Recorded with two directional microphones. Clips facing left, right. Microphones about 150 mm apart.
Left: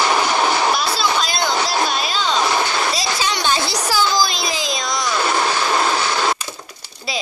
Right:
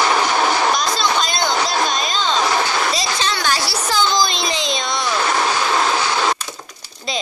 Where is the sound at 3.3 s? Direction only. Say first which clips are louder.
Left 1 dB; 20° left (ahead or behind); by 5.1 s centre (ahead or behind).